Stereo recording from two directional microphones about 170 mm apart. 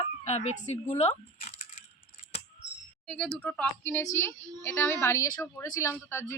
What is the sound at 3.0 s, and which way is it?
A woman's voice, 5° left (ahead or behind).